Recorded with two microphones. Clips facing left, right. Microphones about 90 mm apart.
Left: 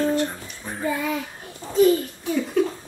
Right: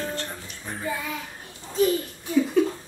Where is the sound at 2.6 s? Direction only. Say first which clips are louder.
Left 1 dB; centre (ahead or behind).